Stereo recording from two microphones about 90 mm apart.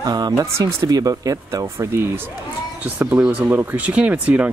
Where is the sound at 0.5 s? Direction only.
30° right (ahead or behind).